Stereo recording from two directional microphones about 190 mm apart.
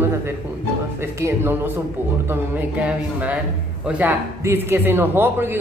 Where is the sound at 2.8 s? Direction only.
5° right (ahead or behind).